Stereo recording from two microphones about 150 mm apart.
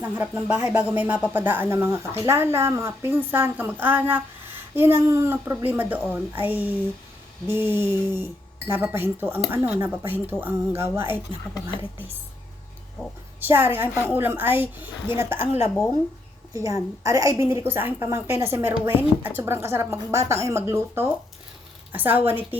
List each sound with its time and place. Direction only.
0.0 s a woman's voice: 10° right (ahead or behind)
13.5 s a woman's voice: 15° right (ahead or behind)
16.5 s a woman's voice: 20° right (ahead or behind)